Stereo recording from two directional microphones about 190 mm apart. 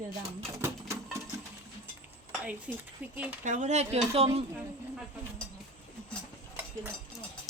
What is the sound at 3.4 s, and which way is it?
Speech, 40° right (ahead or behind).